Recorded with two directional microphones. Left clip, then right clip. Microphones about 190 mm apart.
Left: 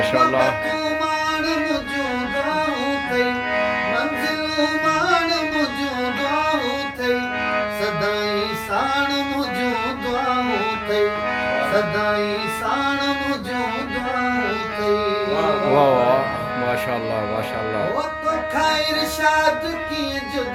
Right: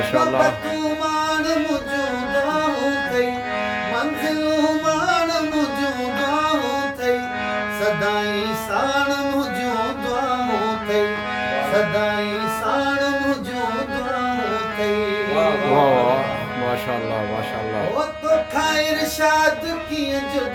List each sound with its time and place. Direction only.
0.0 s music: centre (ahead or behind)
15.7 s music: centre (ahead or behind)